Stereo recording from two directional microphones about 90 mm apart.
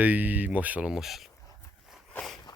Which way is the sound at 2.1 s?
10° left (ahead or behind).